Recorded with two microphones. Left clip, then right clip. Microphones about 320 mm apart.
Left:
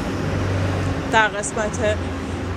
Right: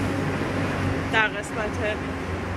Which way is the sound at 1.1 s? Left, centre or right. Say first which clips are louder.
Left 6 dB; centre.